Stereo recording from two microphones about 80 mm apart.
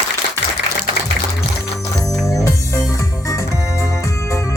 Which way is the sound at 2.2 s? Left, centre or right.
Left.